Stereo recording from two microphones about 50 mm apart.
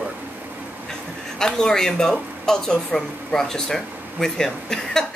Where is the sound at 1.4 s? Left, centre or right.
Centre.